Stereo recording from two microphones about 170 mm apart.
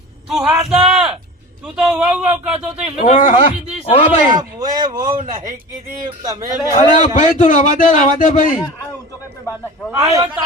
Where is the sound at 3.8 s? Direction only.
35° left (ahead or behind).